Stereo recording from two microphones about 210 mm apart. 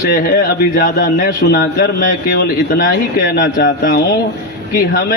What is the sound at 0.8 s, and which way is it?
Speech, 45° left (ahead or behind).